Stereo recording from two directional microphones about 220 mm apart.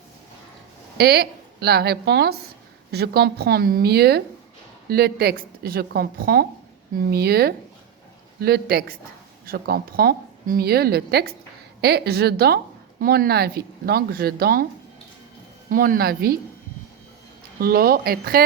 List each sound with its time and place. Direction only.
0.9 s a woman's voice: 45° right (ahead or behind)
15.7 s a woman's voice: 40° right (ahead or behind)
17.6 s a woman's voice: 45° right (ahead or behind)